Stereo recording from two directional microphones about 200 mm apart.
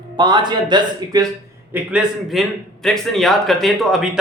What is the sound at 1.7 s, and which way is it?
A man's voice, 5° right (ahead or behind).